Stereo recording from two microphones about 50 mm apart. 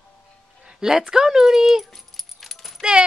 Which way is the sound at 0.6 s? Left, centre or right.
Centre.